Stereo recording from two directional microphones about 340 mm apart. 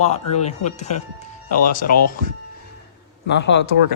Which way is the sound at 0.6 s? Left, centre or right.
Centre.